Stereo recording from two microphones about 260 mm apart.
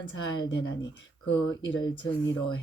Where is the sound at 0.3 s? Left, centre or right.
Left.